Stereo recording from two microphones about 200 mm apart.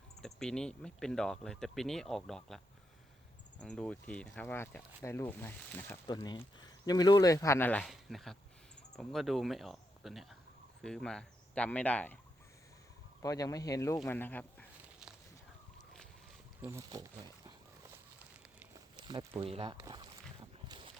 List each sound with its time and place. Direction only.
0.2 s speech: centre (ahead or behind)
3.6 s speech: 5° left (ahead or behind)
13.2 s speech: 15° left (ahead or behind)
16.6 s speech: 15° right (ahead or behind)
18.9 s a sound: 20° right (ahead or behind)
19.4 s speech: 25° right (ahead or behind)
19.7 s a sound: 20° right (ahead or behind)